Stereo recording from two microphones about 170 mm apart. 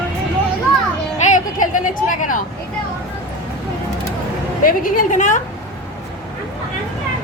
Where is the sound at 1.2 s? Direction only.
50° left (ahead or behind).